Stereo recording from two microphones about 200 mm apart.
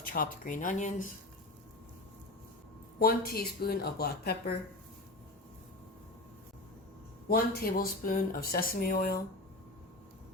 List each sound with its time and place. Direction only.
0.0 s speech: 45° left (ahead or behind)
3.0 s speech: 50° left (ahead or behind)
7.3 s speech: 50° left (ahead or behind)